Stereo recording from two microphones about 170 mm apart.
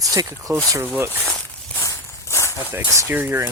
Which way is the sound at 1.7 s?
20° left (ahead or behind).